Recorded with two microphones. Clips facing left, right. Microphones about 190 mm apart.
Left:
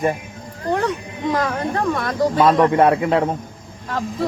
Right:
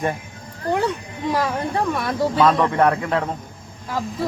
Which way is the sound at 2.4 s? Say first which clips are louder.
Left 3 dB; 15° left (ahead or behind).